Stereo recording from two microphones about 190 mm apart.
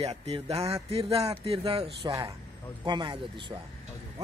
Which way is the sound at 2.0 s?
20° right (ahead or behind).